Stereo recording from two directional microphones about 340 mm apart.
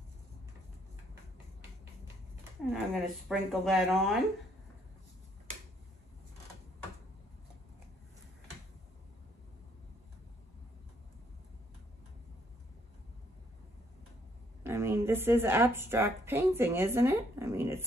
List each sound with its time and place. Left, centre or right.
2.7 s speech: centre
14.6 s a woman's voice: centre